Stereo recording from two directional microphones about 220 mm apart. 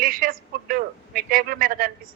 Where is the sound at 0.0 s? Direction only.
40° right (ahead or behind).